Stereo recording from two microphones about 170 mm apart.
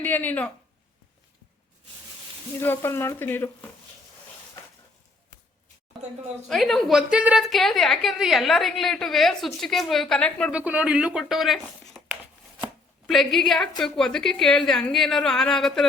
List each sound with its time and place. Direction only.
0.0 s speech: 10° left (ahead or behind)
2.6 s speech: 15° left (ahead or behind)
6.5 s a woman's voice: centre (ahead or behind)
10.5 s a woman's voice: 10° right (ahead or behind)
13.1 s a woman's voice: centre (ahead or behind)